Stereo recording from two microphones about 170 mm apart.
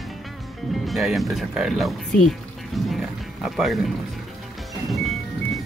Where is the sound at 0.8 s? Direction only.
Centre (ahead or behind).